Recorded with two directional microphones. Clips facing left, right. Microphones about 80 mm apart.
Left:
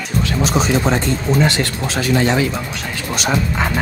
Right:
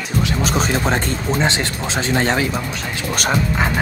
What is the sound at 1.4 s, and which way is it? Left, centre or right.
Speech, right.